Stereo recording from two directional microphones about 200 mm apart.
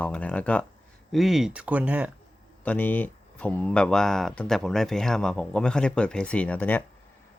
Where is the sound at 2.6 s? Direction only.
10° left (ahead or behind).